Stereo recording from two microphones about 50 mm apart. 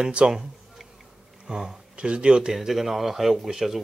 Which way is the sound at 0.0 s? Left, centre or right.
Centre.